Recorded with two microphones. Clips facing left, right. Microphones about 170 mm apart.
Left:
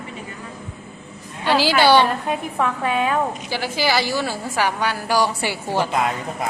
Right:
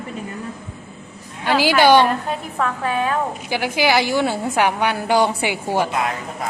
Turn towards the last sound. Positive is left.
turn(degrees=-15)  # may be behind; listen again after turning